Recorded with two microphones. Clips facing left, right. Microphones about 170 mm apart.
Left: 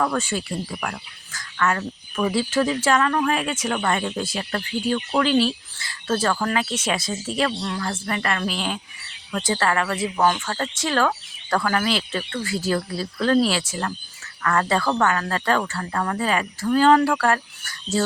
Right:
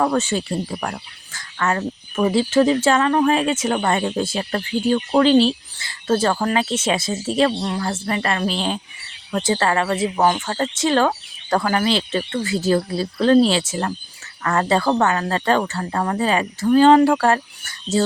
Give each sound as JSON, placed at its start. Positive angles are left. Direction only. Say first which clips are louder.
{"t": 0.0, "sound": "speech", "louder": "right 4 dB", "side_deg": -25}